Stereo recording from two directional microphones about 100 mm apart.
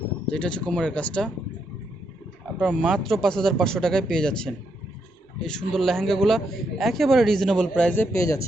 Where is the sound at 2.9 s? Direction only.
Centre (ahead or behind).